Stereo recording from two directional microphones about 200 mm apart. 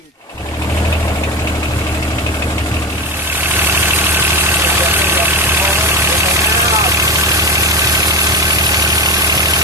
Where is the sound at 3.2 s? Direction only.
10° right (ahead or behind).